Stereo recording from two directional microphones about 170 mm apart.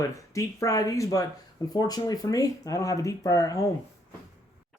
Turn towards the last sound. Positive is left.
turn(degrees=20)  # may be behind; listen again after turning